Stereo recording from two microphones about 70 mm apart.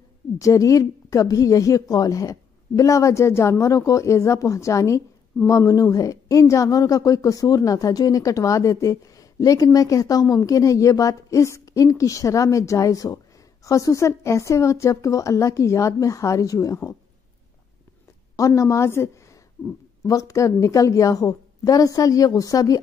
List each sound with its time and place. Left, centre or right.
0.4 s a woman's voice: left
18.3 s a woman's voice: left
20.0 s a woman's voice: left